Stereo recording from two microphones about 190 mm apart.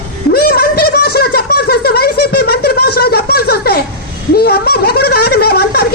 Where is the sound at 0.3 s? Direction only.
55° left (ahead or behind).